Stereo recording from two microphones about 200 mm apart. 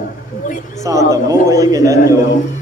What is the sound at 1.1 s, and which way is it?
A man's voice, 15° right (ahead or behind).